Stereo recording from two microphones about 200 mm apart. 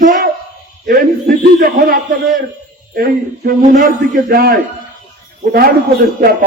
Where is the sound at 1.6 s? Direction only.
45° right (ahead or behind).